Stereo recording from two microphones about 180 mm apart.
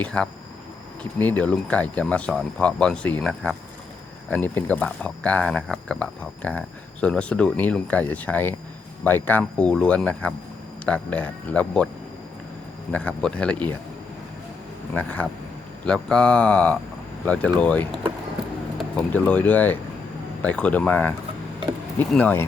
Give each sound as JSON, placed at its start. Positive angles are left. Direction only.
{"t": 0.0, "sound": "speech", "side_deg": 5}
{"t": 12.9, "sound": "speech", "side_deg": 5}
{"t": 14.9, "sound": "speech", "side_deg": 10}